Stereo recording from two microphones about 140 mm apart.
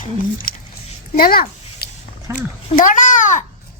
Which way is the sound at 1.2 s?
90° left.